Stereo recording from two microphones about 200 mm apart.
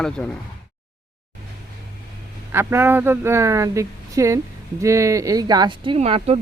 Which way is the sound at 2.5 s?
10° right (ahead or behind).